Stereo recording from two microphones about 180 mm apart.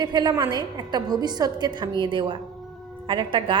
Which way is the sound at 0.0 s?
25° right (ahead or behind).